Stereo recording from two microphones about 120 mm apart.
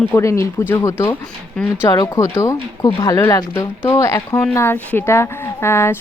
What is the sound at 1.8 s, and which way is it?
A woman's voice, 30° left (ahead or behind).